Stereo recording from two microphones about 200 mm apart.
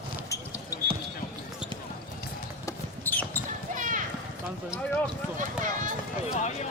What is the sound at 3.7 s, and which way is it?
Clip-clop, 40° right (ahead or behind).